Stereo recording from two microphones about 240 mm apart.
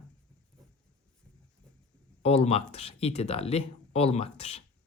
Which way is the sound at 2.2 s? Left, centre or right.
Left.